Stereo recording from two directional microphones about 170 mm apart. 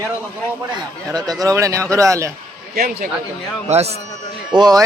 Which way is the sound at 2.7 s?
60° right (ahead or behind).